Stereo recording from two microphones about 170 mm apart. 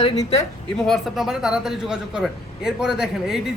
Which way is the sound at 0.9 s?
Centre (ahead or behind).